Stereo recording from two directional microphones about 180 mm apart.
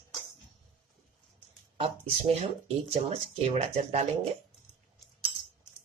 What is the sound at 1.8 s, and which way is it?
Speech, 35° right (ahead or behind).